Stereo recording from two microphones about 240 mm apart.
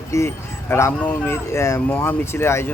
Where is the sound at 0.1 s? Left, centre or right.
Centre.